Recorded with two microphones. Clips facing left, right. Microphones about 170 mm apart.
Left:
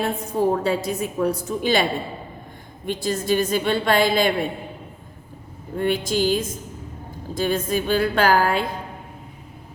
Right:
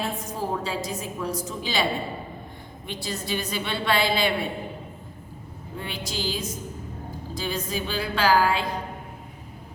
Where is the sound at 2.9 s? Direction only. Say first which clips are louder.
Left 9 dB; 45° left (ahead or behind).